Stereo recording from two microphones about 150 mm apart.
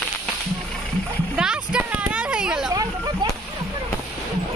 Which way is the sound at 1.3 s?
5° right (ahead or behind).